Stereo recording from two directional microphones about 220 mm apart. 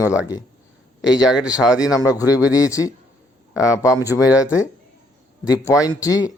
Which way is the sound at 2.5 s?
15° left (ahead or behind).